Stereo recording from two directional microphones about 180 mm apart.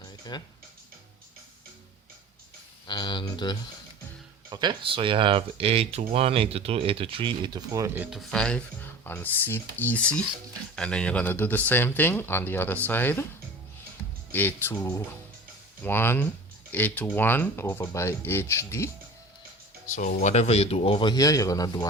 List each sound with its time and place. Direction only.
0.3 s speech: 25° left (ahead or behind)
2.8 s speech: 25° left (ahead or behind)
4.4 s speech: 25° right (ahead or behind)
8.1 s speech: 5° left (ahead or behind)
14.3 s speech: 10° left (ahead or behind)
19.9 s speech: 50° left (ahead or behind)
20.2 s speech: 35° left (ahead or behind); by 21.8 s 20° left (ahead or behind)